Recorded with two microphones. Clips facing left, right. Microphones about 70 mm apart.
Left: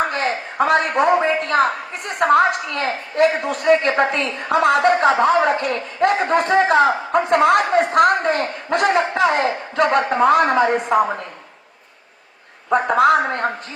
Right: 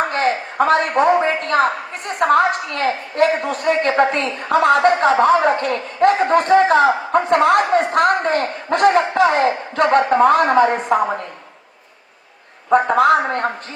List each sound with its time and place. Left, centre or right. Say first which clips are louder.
0.1 s a sound: right 3 dB; right
1.6 s a man's voice: right 1 dB; right
13.0 s a man's voice: right 1 dB; right